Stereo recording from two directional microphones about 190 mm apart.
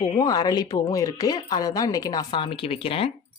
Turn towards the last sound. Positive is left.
turn(degrees=30)  # may be behind; listen again after turning